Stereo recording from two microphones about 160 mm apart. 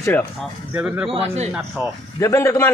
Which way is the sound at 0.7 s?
5° right (ahead or behind).